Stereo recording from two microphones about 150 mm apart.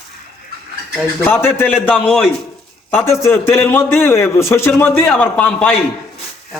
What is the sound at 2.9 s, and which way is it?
A man's voice, 15° left (ahead or behind).